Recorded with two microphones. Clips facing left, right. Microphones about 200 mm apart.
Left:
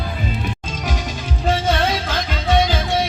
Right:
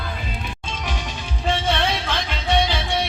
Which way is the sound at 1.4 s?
40° left (ahead or behind).